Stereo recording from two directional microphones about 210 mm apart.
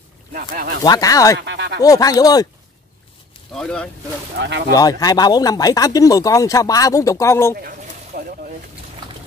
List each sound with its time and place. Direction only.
0.3 s speech: 45° right (ahead or behind)
0.8 s speech: 15° left (ahead or behind)
1.4 s speech: 55° right (ahead or behind)
1.8 s speech: 15° left (ahead or behind)
3.5 s speech: 5° left (ahead or behind)
4.4 s speech: 55° right (ahead or behind)
4.7 s speech: 15° left (ahead or behind)
8.1 s speech: 45° right (ahead or behind)